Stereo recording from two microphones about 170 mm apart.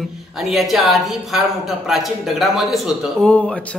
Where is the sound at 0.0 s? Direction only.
Centre (ahead or behind).